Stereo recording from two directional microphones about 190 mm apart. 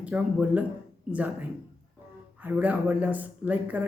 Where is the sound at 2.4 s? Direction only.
10° right (ahead or behind).